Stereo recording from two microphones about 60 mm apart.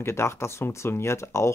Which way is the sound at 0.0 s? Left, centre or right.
Left.